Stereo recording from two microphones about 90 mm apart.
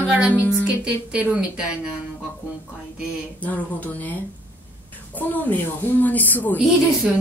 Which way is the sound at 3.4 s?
15° left (ahead or behind).